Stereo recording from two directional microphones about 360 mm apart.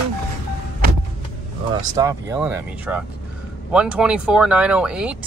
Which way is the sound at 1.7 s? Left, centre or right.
Centre.